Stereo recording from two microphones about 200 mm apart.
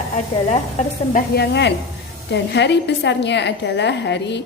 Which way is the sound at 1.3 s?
55° left (ahead or behind).